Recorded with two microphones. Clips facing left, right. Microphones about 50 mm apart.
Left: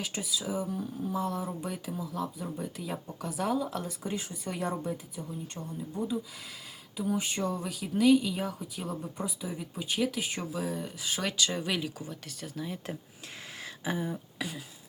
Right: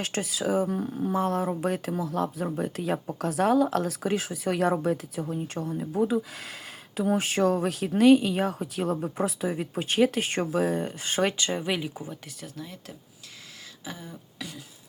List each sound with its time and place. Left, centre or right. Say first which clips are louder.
0.0 s speech: right 6 dB; right
0.8 s speech: right 6 dB; right
1.1 s speech: right 7 dB; right
6.0 s speech: right 8 dB; right
9.1 s speech: right 8 dB; right
11.6 s speech: right 3 dB; centre
12.4 s speech: left 2 dB; centre
13.8 s speech: left 7 dB; centre